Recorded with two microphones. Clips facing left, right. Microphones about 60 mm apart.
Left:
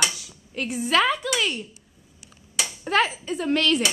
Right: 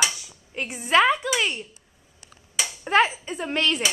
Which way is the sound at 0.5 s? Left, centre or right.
Right.